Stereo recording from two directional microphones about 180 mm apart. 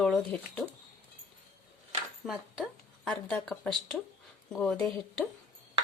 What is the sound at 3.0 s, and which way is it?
Speech, 5° left (ahead or behind).